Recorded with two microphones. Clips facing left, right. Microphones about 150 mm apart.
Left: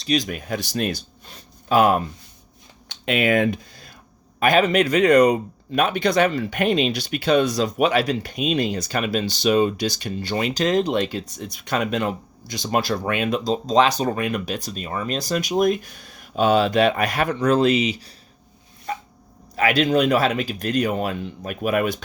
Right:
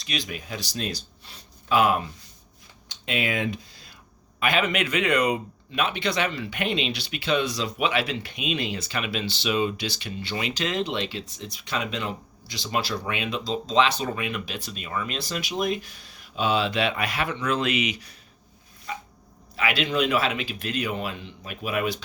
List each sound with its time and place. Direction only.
0.0 s speech: 40° left (ahead or behind)
2.9 s speech: 60° left (ahead or behind); by 18.2 s 30° left (ahead or behind)
18.9 s a sound: 45° left (ahead or behind)
19.5 s speech: 45° left (ahead or behind)